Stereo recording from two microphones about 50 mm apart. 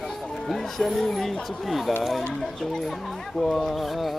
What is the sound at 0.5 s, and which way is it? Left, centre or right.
Speech, centre.